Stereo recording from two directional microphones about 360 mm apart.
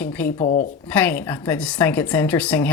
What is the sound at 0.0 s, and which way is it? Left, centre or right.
Speech, centre.